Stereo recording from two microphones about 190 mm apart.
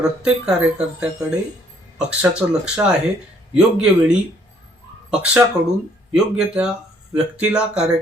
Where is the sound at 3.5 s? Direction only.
5° right (ahead or behind).